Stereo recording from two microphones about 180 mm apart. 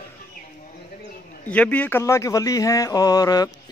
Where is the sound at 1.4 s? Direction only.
10° left (ahead or behind).